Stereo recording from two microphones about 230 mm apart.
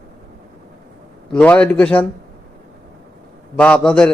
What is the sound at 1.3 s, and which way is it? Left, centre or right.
Speech, centre.